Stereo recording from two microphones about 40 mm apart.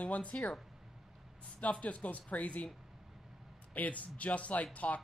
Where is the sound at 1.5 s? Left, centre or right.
Left.